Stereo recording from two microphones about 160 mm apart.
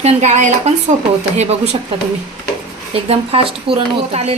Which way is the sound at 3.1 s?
35° right (ahead or behind).